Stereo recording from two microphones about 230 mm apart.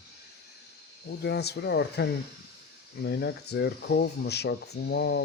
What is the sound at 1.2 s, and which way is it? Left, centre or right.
Speech, left.